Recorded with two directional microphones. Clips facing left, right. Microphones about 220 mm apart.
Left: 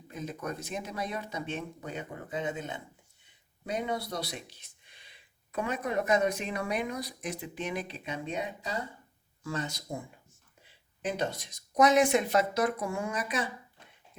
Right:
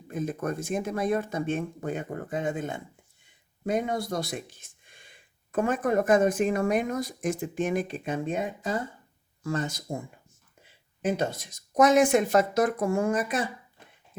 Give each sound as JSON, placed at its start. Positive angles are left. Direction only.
{"t": 0.1, "sound": "speech", "side_deg": -50}
{"t": 11.0, "sound": "speech", "side_deg": -45}